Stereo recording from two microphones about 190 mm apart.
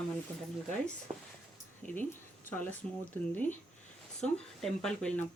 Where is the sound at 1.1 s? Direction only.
35° right (ahead or behind).